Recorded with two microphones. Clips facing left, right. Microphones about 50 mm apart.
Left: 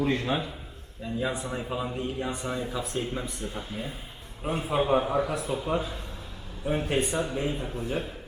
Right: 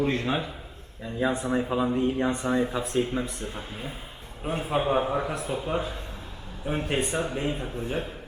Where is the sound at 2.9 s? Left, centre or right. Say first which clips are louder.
Right 7 dB; centre.